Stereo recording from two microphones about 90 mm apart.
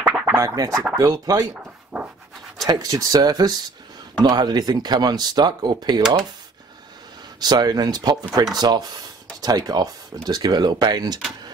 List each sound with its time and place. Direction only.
0.0 s scratching: 10° right (ahead or behind)
0.3 s scratching: 35° right (ahead or behind)
0.9 s speech: 40° right (ahead or behind)
1.5 s dog: 10° right (ahead or behind)
2.6 s speech: 45° right (ahead or behind)
7.3 s speech: 50° right (ahead or behind)